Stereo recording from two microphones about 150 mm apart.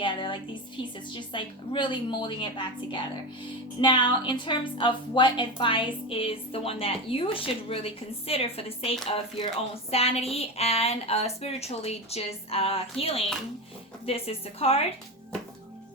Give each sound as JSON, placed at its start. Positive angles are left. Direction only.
{"t": 0.0, "sound": "a woman's voice", "side_deg": 35}